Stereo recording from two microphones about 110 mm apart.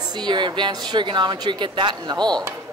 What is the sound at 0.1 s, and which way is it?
A woman's voice, 40° right (ahead or behind).